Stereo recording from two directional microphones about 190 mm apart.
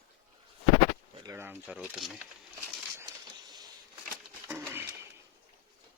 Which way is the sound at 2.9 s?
20° right (ahead or behind).